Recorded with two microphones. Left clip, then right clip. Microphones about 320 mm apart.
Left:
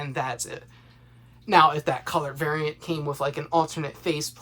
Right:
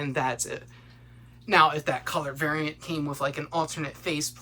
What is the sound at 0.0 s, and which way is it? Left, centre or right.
Speech, centre.